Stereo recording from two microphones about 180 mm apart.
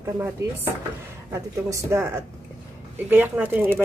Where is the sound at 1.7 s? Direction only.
15° right (ahead or behind).